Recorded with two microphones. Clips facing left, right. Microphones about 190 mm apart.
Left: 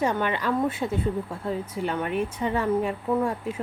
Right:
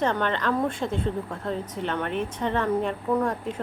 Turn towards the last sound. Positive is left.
turn(degrees=10)  # may be behind; listen again after turning